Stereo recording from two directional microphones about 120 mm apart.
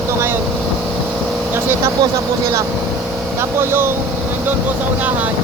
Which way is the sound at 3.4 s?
20° right (ahead or behind).